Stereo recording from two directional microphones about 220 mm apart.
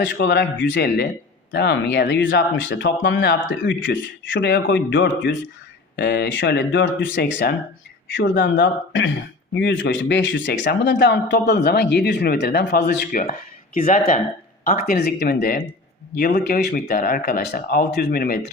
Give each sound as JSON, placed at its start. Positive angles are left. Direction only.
{"t": 0.0, "sound": "speech", "side_deg": 50}